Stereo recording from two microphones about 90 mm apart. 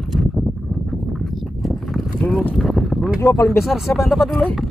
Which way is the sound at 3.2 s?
40° left (ahead or behind).